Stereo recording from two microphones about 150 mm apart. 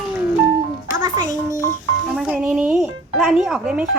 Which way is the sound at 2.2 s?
5° right (ahead or behind).